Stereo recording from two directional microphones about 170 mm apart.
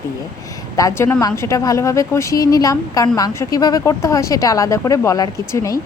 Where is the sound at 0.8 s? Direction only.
20° left (ahead or behind).